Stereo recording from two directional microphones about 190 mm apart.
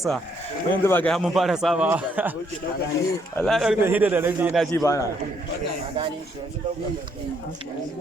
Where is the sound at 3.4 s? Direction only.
Centre (ahead or behind).